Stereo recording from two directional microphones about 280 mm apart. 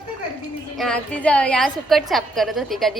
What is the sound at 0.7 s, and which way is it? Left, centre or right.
A woman's voice, centre.